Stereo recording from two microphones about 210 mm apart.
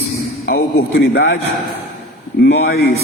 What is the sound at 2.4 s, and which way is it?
Speech, 50° left (ahead or behind).